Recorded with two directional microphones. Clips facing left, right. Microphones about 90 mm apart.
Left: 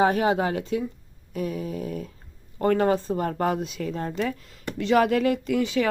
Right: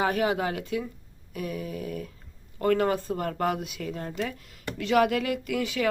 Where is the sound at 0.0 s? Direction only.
25° left (ahead or behind).